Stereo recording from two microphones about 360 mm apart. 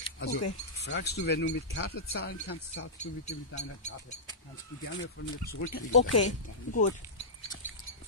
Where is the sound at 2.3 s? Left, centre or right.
Left.